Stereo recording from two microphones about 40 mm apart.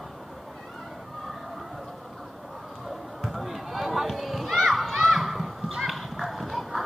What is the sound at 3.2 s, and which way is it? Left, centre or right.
Children playing, centre.